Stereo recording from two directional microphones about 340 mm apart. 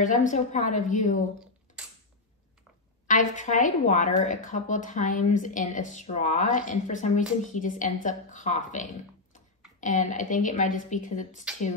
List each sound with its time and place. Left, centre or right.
0.0 s speech: left
3.1 s speech: left